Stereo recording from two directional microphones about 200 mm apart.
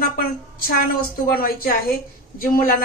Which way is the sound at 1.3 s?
45° left (ahead or behind).